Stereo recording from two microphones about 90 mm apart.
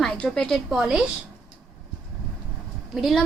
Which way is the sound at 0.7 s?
10° right (ahead or behind).